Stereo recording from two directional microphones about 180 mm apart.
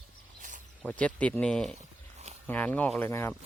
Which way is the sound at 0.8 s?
5° left (ahead or behind).